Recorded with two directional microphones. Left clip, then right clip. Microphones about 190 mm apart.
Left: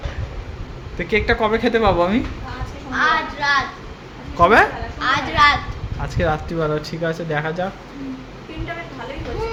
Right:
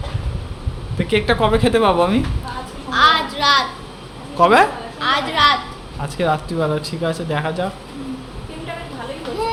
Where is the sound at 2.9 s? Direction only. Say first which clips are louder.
Right 4 dB; 55° right (ahead or behind).